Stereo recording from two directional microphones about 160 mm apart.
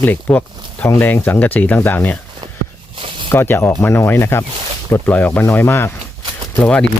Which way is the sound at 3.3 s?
15° left (ahead or behind).